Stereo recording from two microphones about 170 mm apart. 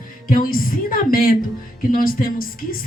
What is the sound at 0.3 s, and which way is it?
Speech, 55° left (ahead or behind).